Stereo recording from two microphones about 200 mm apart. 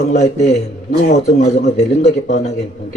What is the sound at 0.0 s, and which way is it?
A man's voice, 35° left (ahead or behind).